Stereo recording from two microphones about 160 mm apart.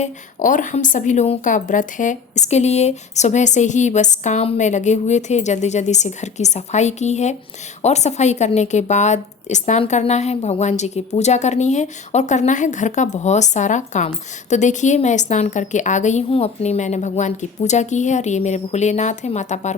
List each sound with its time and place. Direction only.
0.0 s a woman's voice: 55° left (ahead or behind)